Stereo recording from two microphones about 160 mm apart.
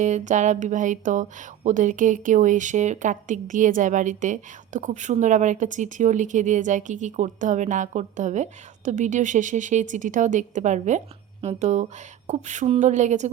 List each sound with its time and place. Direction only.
0.0 s speech: 50° right (ahead or behind)